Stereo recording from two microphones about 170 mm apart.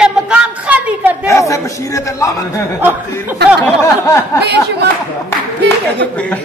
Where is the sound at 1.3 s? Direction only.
20° left (ahead or behind).